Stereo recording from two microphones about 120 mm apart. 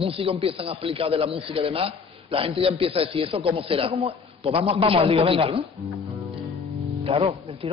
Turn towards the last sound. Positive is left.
turn(degrees=-50)  # may be behind; listen again after turning